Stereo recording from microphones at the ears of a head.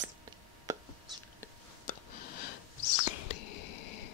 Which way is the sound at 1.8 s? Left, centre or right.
Left.